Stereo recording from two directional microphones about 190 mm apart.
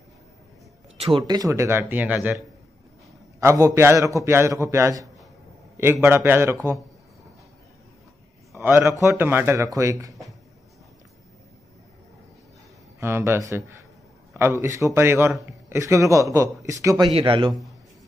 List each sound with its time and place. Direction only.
1.1 s a man's voice: 20° right (ahead or behind)
8.5 s a man's voice: 10° right (ahead or behind)
13.0 s a man's voice: 10° right (ahead or behind)